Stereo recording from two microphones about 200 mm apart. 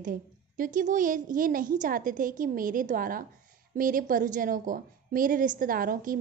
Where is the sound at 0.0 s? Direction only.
40° right (ahead or behind).